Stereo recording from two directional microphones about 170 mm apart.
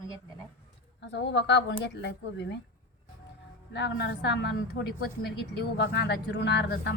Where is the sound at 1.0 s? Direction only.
90° left.